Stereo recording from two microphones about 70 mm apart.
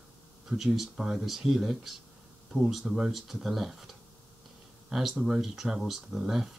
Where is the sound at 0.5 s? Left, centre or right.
Centre.